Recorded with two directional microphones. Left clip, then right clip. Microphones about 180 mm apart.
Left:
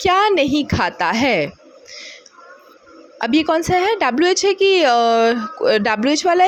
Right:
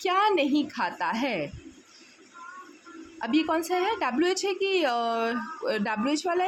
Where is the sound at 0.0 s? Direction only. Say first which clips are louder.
Left 9 dB; 40° left (ahead or behind).